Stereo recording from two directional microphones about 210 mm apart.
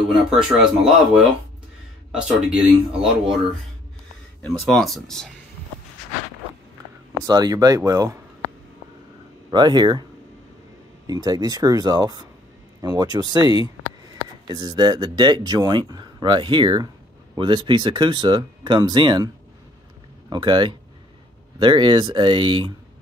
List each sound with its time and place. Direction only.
0.3 s speech: centre (ahead or behind)
2.1 s speech: 5° right (ahead or behind)
4.6 s speech: centre (ahead or behind)
7.2 s speech: 15° right (ahead or behind)
9.5 s speech: 20° right (ahead or behind)
11.1 s speech: 20° right (ahead or behind)